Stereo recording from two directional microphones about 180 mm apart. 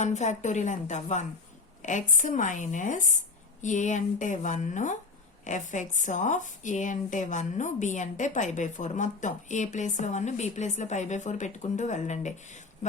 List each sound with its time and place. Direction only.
0.0 s a woman's voice: 40° left (ahead or behind)